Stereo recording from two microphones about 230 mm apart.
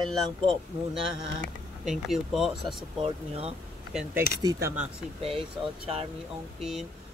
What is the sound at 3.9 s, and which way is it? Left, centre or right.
Speech, centre.